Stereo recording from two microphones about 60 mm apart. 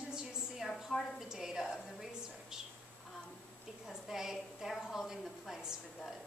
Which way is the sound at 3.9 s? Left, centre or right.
Centre.